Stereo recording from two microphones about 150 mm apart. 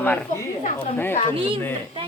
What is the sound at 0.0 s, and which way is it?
A woman's voice, 10° left (ahead or behind).